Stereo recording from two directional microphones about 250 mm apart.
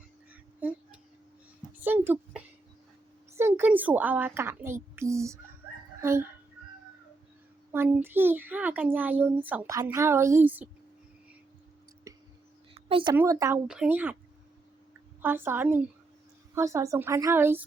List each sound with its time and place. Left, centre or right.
1.7 s a sound: centre
3.3 s a child's voice: centre
7.7 s a child's voice: centre
12.1 s whispering: centre
12.7 s a sound: right
13.1 s a child's voice: centre
15.2 s a child's voice: centre